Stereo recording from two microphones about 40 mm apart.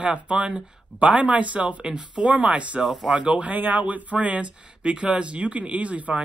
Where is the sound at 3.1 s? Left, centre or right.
Right.